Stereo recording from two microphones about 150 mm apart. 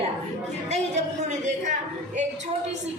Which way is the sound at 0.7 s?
50° right (ahead or behind).